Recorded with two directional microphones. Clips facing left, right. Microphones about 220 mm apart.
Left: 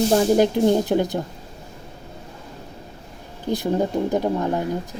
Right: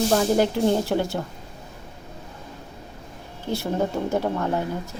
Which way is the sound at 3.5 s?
15° left (ahead or behind).